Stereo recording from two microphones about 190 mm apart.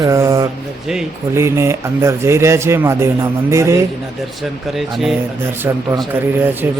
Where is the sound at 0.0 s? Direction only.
15° right (ahead or behind).